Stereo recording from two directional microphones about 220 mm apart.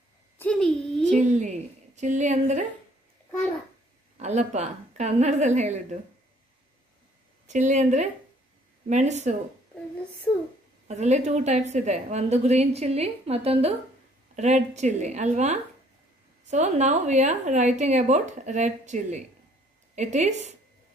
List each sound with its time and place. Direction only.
0.4 s a sound: 5° left (ahead or behind)
1.1 s a woman's voice: 35° right (ahead or behind)
4.2 s a woman's voice: 30° right (ahead or behind)
7.4 s a woman's voice: 35° right (ahead or behind)
10.9 s a woman's voice: 30° right (ahead or behind)